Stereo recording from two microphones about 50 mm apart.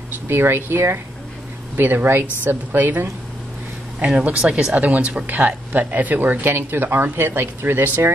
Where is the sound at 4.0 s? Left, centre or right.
Centre.